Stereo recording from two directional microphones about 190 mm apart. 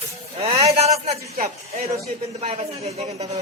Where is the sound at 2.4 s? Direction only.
30° right (ahead or behind).